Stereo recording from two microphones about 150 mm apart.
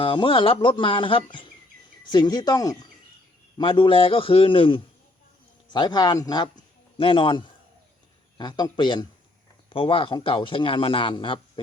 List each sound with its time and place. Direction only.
0.0 s a man's voice: 35° left (ahead or behind)